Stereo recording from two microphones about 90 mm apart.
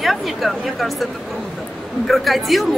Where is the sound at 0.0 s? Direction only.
Centre (ahead or behind).